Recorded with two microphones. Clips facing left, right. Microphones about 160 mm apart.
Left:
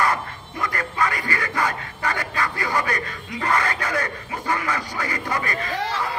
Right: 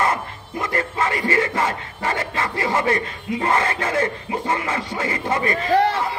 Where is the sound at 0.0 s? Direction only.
25° right (ahead or behind).